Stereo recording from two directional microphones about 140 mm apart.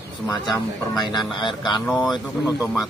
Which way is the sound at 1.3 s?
35° left (ahead or behind).